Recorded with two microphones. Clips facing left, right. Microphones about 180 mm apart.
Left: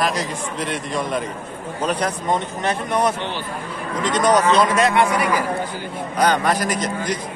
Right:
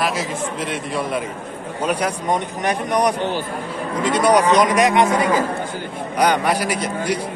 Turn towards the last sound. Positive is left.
turn(degrees=-10)  # may be behind; listen again after turning